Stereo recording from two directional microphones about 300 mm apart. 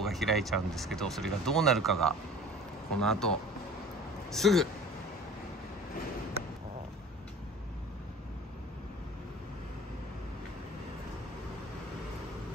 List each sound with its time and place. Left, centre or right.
0.0 s speech: centre